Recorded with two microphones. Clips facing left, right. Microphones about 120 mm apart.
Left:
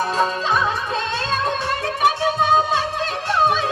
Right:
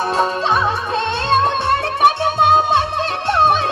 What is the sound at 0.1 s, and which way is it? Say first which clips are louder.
Music: right 3 dB; 65° right (ahead or behind).